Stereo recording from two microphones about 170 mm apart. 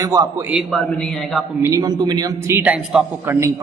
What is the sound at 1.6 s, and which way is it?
A man's voice, 20° right (ahead or behind).